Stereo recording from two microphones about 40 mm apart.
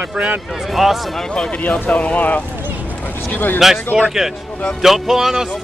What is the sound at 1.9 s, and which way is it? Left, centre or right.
Speech, left.